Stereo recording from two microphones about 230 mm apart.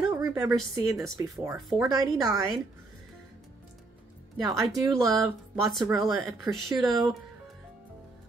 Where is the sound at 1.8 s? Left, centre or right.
Centre.